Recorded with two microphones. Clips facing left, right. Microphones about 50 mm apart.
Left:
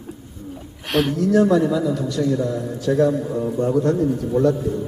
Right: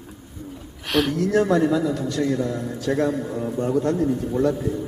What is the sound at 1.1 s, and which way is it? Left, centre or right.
A man's voice, right.